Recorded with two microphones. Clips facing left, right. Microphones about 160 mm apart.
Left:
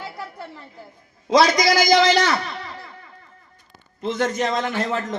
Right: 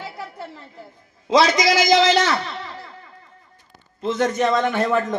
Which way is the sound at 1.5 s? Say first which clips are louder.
Even; 25° right (ahead or behind).